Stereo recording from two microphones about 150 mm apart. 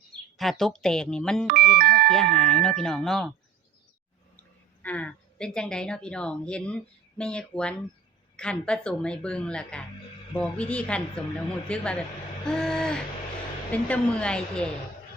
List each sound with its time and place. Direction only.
0.3 s a woman's voice: centre (ahead or behind)
1.5 s speech: 75° right (ahead or behind)
2.0 s a woman's voice: 5° left (ahead or behind)
4.8 s a woman's voice: 10° left (ahead or behind)